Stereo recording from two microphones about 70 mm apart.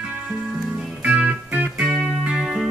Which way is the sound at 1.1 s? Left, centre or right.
Centre.